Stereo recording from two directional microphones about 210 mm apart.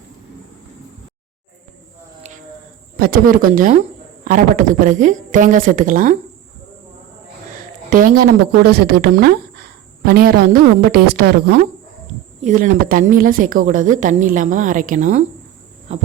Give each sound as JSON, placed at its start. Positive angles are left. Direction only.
{"t": 3.0, "sound": "a woman's voice", "side_deg": -40}
{"t": 7.9, "sound": "speech", "side_deg": -40}
{"t": 12.4, "sound": "a woman's voice", "side_deg": -35}